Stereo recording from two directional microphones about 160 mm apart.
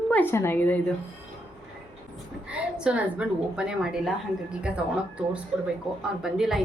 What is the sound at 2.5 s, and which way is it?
A woman's voice, 5° right (ahead or behind).